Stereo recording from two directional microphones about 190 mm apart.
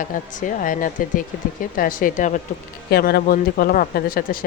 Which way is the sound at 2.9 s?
55° left (ahead or behind).